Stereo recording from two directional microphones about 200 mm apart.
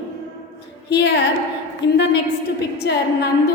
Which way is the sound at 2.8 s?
55° left (ahead or behind).